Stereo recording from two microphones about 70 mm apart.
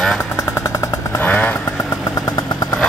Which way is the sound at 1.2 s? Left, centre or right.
Left.